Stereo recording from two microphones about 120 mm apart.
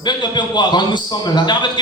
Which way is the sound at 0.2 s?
40° left (ahead or behind).